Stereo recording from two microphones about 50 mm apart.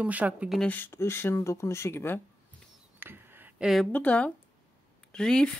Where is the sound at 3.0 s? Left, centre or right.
Right.